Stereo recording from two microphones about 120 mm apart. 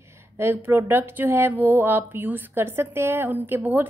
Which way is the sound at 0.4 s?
20° right (ahead or behind).